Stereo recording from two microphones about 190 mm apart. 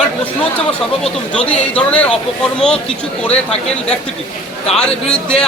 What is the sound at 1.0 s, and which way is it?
Speech, 5° left (ahead or behind).